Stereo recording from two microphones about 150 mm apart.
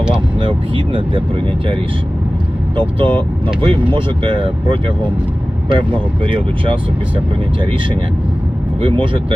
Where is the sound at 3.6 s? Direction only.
35° right (ahead or behind).